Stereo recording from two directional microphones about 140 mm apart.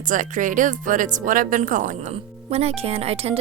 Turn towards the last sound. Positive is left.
turn(degrees=-45)  # may be behind; listen again after turning